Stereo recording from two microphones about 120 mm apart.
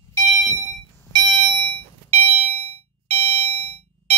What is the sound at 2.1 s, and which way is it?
Fire alarm, 55° right (ahead or behind).